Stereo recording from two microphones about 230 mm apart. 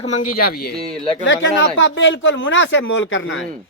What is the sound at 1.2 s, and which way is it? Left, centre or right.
Speech, left.